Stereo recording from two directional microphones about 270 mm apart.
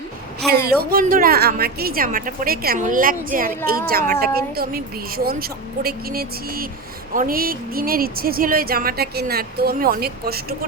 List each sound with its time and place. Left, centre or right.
0.4 s speech: centre
0.8 s speech: right